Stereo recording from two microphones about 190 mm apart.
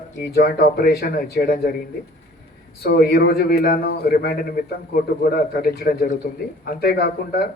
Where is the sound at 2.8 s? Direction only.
55° left (ahead or behind).